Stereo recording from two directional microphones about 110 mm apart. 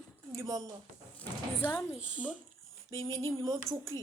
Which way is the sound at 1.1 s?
20° left (ahead or behind).